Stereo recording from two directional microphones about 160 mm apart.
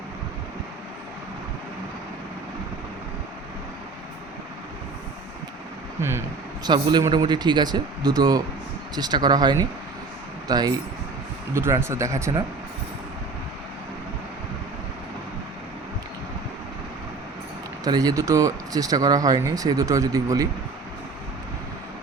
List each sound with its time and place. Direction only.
6.0 s speech: 15° right (ahead or behind)
6.7 s speech: 25° right (ahead or behind)
17.8 s speech: 25° right (ahead or behind)